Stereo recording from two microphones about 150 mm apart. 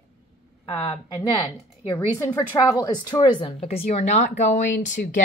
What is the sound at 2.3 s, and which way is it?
Speech, 25° left (ahead or behind).